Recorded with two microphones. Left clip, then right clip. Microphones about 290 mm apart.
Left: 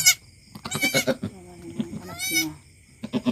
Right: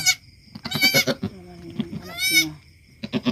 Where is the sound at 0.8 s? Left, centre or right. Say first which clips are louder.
Right 4 dB; right.